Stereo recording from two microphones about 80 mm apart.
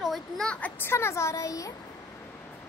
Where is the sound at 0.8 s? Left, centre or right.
Left.